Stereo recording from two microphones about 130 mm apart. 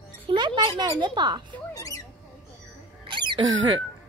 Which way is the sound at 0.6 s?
40° right (ahead or behind).